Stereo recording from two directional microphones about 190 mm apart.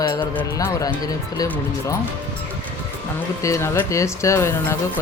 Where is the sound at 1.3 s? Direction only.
20° left (ahead or behind).